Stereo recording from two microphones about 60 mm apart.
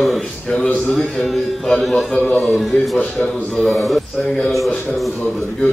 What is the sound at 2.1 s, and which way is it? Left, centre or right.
Speech, left.